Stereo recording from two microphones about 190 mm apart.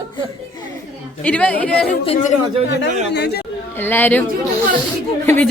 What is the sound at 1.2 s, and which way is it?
Speech, 5° left (ahead or behind).